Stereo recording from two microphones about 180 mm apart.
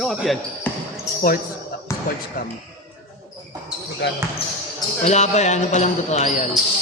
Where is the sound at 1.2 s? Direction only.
50° left (ahead or behind).